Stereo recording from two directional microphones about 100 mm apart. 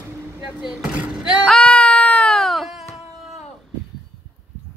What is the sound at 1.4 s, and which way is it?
Music, 10° left (ahead or behind).